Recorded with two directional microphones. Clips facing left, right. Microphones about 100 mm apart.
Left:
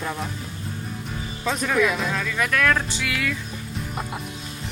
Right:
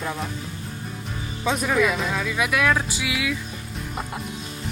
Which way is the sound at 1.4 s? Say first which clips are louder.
Right 1 dB; 10° right (ahead or behind).